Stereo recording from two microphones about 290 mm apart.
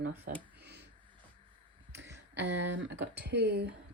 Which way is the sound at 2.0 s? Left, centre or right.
Right.